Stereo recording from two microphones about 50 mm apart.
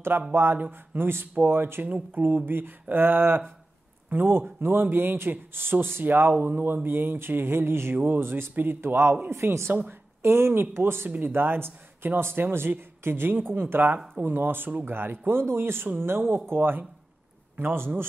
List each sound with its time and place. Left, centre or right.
0.3 s speech: right
1.9 s speech: right
2.2 s speech: right
7.9 s speech: right
9.3 s speech: right